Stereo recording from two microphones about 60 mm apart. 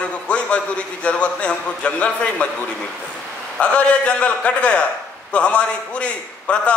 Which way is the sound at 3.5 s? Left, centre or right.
Centre.